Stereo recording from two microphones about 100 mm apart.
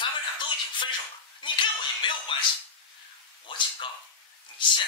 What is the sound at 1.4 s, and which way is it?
Slap, 55° left (ahead or behind).